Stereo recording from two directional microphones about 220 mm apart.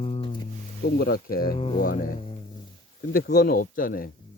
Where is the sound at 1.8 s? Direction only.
40° left (ahead or behind).